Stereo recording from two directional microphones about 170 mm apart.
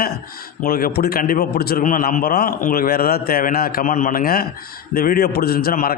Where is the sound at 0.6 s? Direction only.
60° left (ahead or behind).